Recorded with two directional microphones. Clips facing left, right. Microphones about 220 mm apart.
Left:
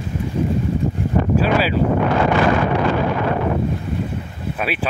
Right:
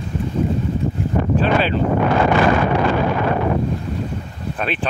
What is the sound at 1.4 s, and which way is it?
Wind noise, 5° left (ahead or behind).